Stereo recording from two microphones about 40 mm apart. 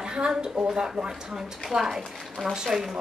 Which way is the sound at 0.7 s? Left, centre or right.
Centre.